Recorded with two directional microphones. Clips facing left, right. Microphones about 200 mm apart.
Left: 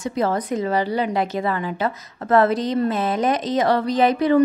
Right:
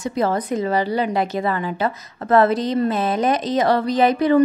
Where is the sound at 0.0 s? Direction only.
35° right (ahead or behind).